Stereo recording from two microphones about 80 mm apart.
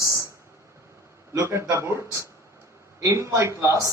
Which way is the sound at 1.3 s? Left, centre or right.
Right.